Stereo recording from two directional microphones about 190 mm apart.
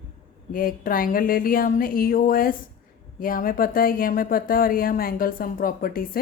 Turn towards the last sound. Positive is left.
turn(degrees=50)  # may be behind; listen again after turning